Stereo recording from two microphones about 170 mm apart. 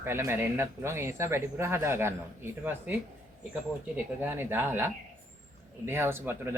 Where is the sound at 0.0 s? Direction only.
15° right (ahead or behind).